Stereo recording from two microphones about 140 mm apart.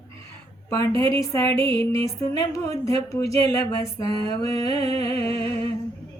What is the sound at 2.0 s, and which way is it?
Speech, 25° left (ahead or behind).